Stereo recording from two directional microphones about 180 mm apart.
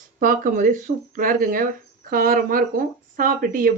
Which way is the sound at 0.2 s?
50° right (ahead or behind).